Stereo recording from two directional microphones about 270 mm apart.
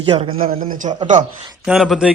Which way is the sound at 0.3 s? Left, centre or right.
Right.